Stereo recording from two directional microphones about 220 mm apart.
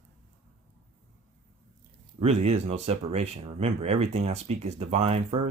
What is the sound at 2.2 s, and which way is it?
A man's voice, 30° right (ahead or behind).